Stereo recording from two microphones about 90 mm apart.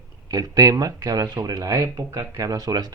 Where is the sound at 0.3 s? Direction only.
45° right (ahead or behind).